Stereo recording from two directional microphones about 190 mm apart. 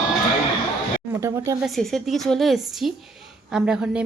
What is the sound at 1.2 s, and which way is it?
Speech, 15° right (ahead or behind).